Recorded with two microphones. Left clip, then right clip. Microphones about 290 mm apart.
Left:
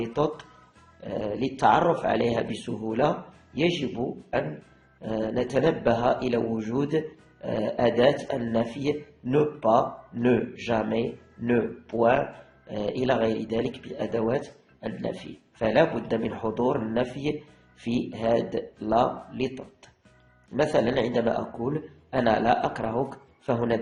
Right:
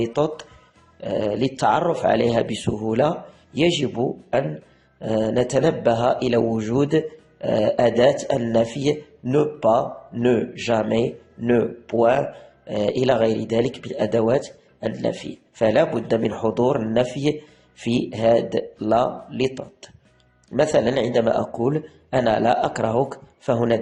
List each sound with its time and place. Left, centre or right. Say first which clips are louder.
0.0 s a man's voice: right 5 dB; right